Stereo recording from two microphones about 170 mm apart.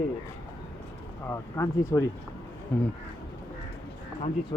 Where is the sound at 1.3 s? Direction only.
20° left (ahead or behind).